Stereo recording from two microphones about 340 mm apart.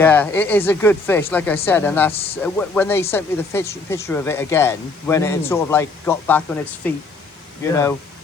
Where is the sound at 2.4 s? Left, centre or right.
Centre.